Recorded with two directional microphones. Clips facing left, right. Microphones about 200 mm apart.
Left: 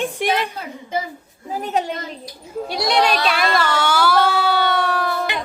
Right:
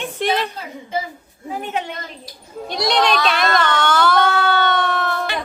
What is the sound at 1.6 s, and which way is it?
Speech, 40° left (ahead or behind).